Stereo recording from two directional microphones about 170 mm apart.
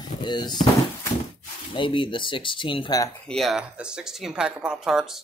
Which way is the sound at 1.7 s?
30° left (ahead or behind).